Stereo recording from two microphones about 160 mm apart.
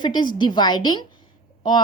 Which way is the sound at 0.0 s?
30° left (ahead or behind).